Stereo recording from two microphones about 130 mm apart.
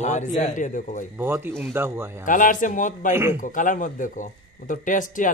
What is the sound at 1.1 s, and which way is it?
Speech, 15° right (ahead or behind).